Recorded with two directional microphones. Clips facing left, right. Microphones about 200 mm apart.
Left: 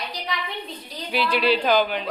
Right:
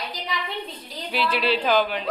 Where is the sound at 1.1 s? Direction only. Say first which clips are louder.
Left 2 dB; centre (ahead or behind).